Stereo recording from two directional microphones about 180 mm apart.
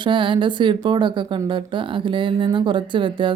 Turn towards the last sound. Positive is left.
turn(degrees=-25)  # may be behind; listen again after turning